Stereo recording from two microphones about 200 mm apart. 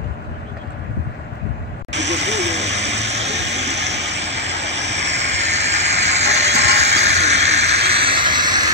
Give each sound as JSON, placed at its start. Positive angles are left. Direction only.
{"t": 1.9, "sound": "vehicle", "side_deg": -60}
{"t": 2.6, "sound": "vehicle", "side_deg": -35}
{"t": 3.9, "sound": "vehicle", "side_deg": -60}
{"t": 5.3, "sound": "vehicle", "side_deg": -35}
{"t": 5.7, "sound": "hiss", "side_deg": -35}